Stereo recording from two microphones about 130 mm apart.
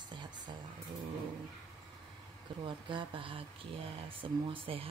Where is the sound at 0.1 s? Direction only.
35° right (ahead or behind).